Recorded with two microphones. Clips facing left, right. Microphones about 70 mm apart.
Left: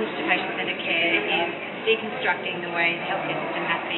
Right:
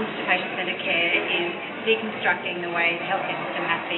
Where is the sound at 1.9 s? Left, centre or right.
Centre.